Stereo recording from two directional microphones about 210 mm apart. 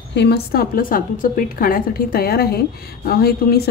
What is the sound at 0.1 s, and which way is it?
A woman's voice, 50° left (ahead or behind).